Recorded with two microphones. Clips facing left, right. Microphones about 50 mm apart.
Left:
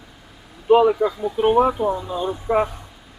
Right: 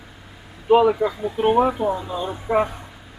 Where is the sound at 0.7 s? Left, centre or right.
Centre.